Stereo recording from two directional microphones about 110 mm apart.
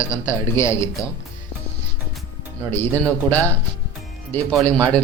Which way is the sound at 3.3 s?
15° left (ahead or behind).